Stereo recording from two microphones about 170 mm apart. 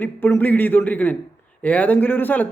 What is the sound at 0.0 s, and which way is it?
Speech, 10° left (ahead or behind).